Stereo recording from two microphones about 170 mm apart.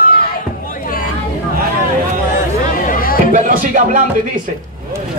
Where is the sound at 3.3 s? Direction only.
50° right (ahead or behind).